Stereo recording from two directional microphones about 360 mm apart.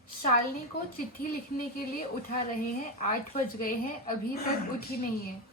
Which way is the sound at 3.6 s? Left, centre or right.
Left.